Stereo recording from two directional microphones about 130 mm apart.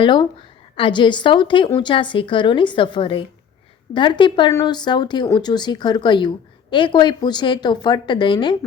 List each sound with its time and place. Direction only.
0.0 s speech: 40° left (ahead or behind)